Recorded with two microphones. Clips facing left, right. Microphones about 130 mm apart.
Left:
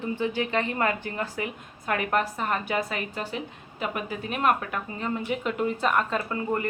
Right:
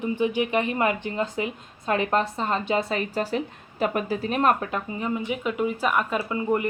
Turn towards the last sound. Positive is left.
turn(degrees=-15)  # may be behind; listen again after turning